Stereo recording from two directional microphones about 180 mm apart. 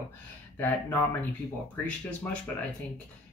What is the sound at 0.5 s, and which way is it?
Speech, 10° left (ahead or behind).